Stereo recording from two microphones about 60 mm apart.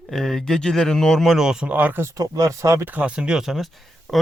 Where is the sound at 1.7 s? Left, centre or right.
Right.